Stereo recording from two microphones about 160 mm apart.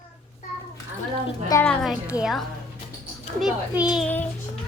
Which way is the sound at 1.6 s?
5° left (ahead or behind).